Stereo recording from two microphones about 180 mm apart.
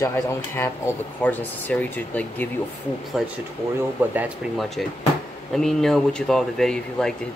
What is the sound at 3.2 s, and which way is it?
Speech, 5° right (ahead or behind).